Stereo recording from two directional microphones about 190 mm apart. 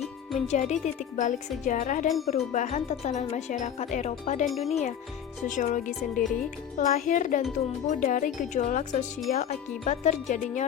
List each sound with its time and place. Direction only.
0.4 s speech: 40° left (ahead or behind)
4.4 s speech: centre (ahead or behind)
4.7 s speech: 35° left (ahead or behind)